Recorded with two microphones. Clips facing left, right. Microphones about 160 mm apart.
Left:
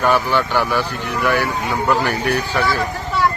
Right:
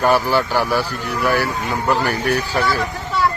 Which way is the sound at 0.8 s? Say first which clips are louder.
Even; 10° right (ahead or behind).